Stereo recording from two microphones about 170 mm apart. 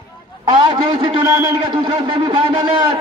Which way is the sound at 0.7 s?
30° right (ahead or behind).